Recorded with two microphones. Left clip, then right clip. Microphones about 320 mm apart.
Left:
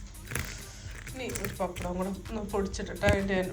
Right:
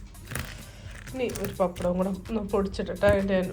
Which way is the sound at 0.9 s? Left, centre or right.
Centre.